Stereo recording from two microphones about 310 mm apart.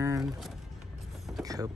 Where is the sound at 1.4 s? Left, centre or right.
Centre.